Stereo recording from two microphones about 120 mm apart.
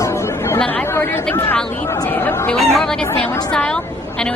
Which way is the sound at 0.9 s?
20° left (ahead or behind).